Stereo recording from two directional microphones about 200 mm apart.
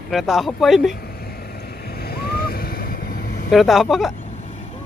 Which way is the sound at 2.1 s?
50° left (ahead or behind).